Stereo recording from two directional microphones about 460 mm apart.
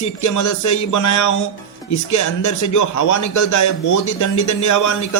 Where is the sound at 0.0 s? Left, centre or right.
Left.